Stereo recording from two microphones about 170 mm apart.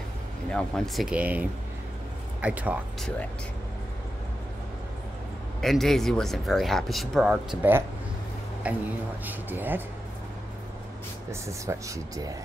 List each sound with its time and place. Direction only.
0.5 s speech: 5° left (ahead or behind)
2.4 s speech: 10° right (ahead or behind)
5.6 s speech: centre (ahead or behind)
11.4 s speech: 15° right (ahead or behind)